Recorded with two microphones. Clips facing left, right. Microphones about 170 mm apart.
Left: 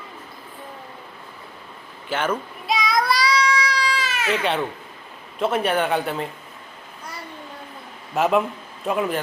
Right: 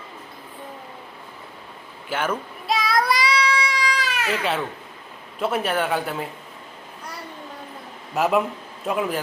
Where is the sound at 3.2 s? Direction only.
30° right (ahead or behind).